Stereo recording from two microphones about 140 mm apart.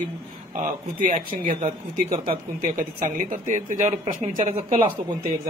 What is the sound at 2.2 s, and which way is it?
Speech, 90° right.